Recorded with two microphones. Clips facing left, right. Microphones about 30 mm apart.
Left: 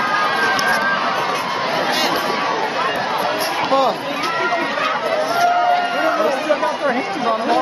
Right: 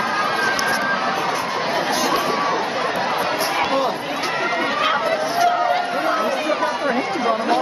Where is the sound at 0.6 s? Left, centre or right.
Centre.